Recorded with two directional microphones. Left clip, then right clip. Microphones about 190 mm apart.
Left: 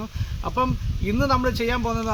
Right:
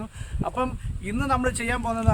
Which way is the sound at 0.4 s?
30° right (ahead or behind).